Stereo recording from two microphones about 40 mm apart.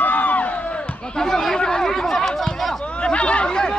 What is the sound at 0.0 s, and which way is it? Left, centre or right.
Crowd, left.